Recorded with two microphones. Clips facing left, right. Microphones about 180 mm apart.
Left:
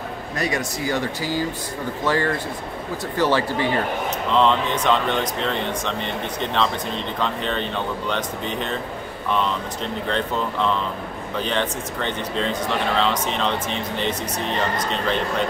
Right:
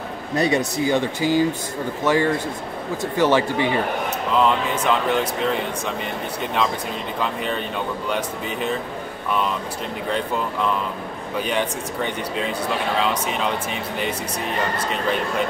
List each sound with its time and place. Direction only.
0.4 s speech: 25° right (ahead or behind); by 5.9 s 5° right (ahead or behind)
7.2 s speech: 10° right (ahead or behind)
10.0 s speech: 10° right (ahead or behind)